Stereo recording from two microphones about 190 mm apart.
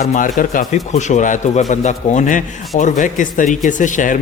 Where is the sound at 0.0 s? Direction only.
35° left (ahead or behind).